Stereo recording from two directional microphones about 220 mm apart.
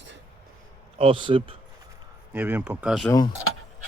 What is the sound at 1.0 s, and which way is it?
Speech, 25° right (ahead or behind).